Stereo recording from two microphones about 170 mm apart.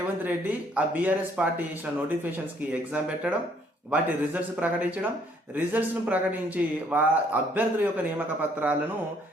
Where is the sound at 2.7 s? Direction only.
5° right (ahead or behind).